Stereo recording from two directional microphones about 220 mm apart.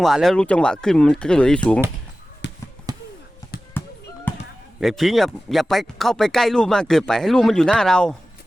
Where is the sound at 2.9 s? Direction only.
15° right (ahead or behind).